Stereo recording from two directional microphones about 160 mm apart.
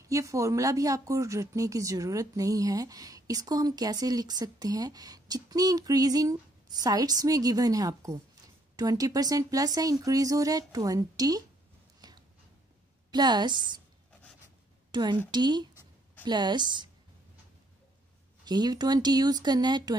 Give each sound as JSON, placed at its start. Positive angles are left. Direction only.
{"t": 0.0, "sound": "speech", "side_deg": -20}
{"t": 12.0, "sound": "a sound", "side_deg": -25}
{"t": 13.1, "sound": "speech", "side_deg": -25}
{"t": 14.9, "sound": "a woman's voice", "side_deg": -25}
{"t": 18.4, "sound": "speech", "side_deg": -25}